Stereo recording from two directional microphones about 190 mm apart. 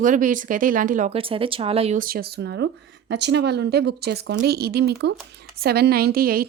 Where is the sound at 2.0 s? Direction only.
50° right (ahead or behind).